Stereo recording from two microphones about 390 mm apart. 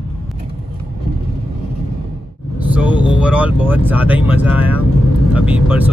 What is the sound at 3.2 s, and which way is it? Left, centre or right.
Speech, centre.